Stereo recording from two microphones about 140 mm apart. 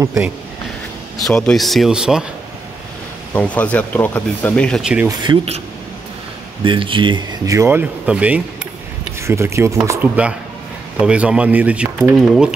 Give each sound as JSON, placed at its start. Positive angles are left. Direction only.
{"t": 1.1, "sound": "speech", "side_deg": 5}
{"t": 3.3, "sound": "speech", "side_deg": 10}
{"t": 5.0, "sound": "speech", "side_deg": -30}
{"t": 6.6, "sound": "speech", "side_deg": -35}